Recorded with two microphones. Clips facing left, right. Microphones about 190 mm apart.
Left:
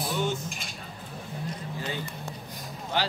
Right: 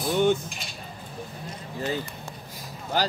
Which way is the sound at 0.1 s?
60° right (ahead or behind).